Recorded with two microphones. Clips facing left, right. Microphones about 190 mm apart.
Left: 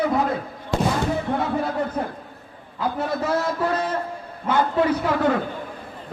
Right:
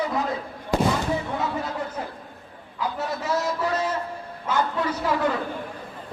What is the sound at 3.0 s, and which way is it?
A man's voice, 55° left (ahead or behind).